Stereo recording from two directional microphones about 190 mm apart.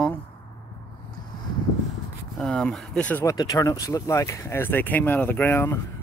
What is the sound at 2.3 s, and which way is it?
Speech, 5° left (ahead or behind).